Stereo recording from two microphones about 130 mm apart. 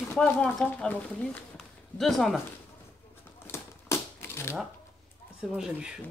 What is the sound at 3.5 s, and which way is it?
Typewriter, 20° left (ahead or behind).